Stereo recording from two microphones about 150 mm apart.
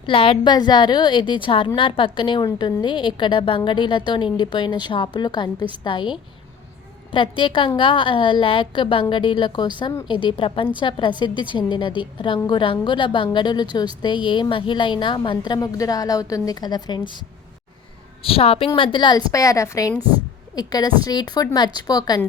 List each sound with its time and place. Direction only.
0.0 s a woman's voice: 35° left (ahead or behind)
18.2 s a woman's voice: 40° left (ahead or behind)